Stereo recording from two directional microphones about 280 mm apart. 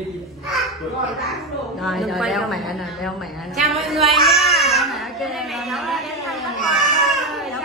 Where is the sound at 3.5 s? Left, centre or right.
Centre.